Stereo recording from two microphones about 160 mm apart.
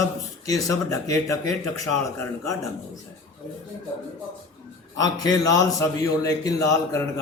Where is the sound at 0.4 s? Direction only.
20° left (ahead or behind).